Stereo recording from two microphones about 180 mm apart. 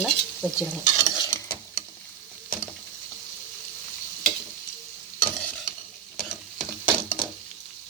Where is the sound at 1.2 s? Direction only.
20° left (ahead or behind).